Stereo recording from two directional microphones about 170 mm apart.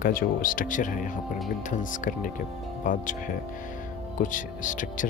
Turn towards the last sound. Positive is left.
turn(degrees=50)  # may be behind; listen again after turning